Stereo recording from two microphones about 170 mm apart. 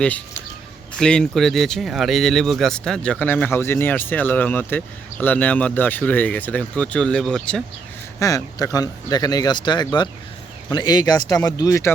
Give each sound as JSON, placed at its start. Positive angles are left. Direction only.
{"t": 0.9, "sound": "speech", "side_deg": 5}
{"t": 8.2, "sound": "speech", "side_deg": 20}